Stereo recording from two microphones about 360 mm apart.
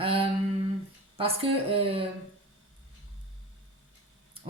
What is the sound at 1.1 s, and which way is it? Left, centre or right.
Speech, centre.